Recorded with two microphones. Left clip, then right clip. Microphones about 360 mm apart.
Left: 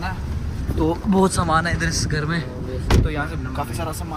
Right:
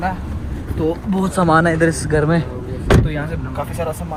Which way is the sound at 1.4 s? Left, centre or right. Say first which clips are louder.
Right 6 dB; right.